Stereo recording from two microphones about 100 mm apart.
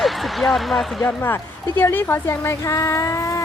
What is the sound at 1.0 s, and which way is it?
A woman's voice, 20° left (ahead or behind).